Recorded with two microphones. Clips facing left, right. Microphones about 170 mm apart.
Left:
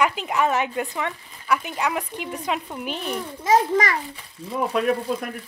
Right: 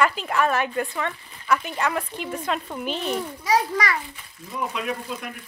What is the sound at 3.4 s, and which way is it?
A child's voice, 45° left (ahead or behind).